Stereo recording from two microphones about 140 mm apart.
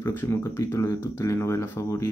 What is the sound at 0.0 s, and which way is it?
Speech, 15° left (ahead or behind).